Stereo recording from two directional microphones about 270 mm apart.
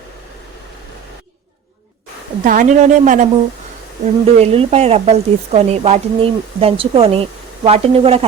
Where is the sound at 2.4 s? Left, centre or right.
Right.